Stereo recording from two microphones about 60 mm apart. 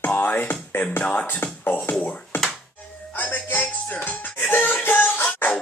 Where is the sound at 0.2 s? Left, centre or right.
Left.